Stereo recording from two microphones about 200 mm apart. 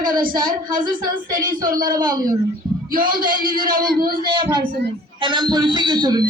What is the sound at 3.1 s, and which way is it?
A man's voice, 45° right (ahead or behind).